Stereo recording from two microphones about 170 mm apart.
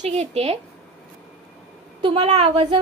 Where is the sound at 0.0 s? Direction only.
40° right (ahead or behind).